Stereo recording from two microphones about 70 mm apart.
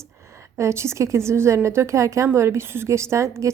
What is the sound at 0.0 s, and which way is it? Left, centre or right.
A woman's voice, right.